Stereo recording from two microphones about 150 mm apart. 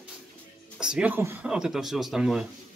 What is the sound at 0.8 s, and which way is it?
Speech, 5° right (ahead or behind).